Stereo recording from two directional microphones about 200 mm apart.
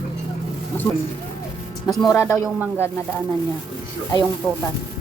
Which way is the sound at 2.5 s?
10° right (ahead or behind).